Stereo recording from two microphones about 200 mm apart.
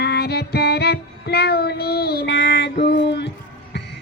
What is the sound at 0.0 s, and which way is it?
Music, 55° left (ahead or behind).